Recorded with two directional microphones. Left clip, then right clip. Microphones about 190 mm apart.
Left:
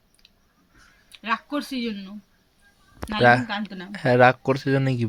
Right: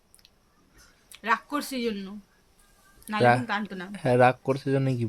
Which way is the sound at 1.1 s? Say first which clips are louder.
Even; 25° right (ahead or behind).